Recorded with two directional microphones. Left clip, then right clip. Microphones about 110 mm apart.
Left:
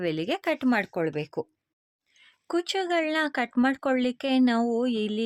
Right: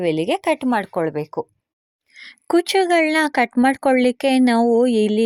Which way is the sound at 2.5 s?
75° right (ahead or behind).